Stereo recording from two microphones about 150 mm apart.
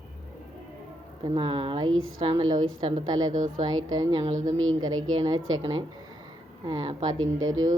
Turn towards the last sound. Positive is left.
turn(degrees=-25)  # may be behind; listen again after turning